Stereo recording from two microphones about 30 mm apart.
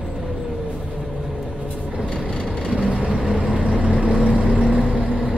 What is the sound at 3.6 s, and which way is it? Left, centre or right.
Vehicle, right.